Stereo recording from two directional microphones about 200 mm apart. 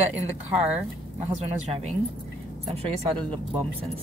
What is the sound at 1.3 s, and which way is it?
Speech, 30° right (ahead or behind).